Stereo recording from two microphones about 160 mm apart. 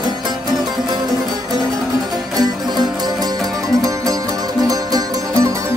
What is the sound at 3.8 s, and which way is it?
Music, 20° right (ahead or behind).